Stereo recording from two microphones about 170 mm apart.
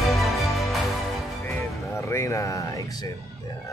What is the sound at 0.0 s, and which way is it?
Music, centre (ahead or behind).